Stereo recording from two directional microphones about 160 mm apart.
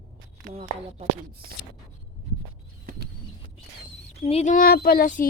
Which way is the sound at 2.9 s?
65° right (ahead or behind).